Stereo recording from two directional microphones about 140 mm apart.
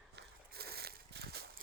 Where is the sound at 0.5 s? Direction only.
90° right.